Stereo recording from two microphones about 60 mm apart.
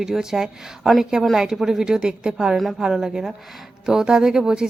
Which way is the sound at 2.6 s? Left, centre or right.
Centre.